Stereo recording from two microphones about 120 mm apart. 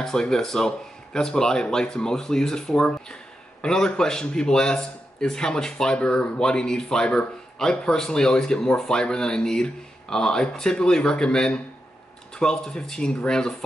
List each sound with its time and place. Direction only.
0.0 s a man's voice: 5° left (ahead or behind)